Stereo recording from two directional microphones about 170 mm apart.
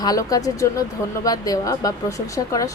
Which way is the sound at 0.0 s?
20° left (ahead or behind).